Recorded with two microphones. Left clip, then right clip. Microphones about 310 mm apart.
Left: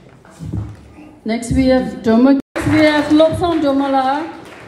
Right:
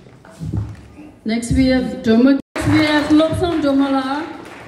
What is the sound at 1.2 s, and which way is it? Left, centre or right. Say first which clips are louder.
A woman's voice: left 1 dB; left.